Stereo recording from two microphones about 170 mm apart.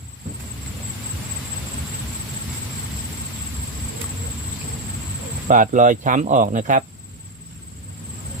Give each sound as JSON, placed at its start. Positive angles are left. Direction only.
{"t": 5.5, "sound": "speech", "side_deg": -50}